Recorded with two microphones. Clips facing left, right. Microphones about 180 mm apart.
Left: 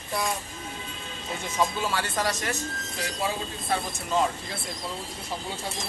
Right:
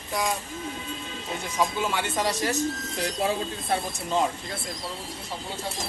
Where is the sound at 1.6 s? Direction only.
15° right (ahead or behind).